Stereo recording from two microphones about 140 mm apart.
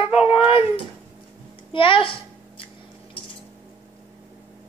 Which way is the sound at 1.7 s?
40° left (ahead or behind).